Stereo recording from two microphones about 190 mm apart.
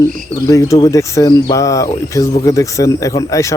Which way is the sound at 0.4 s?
15° left (ahead or behind).